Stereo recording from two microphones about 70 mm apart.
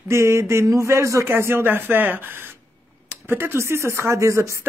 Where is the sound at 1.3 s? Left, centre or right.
Right.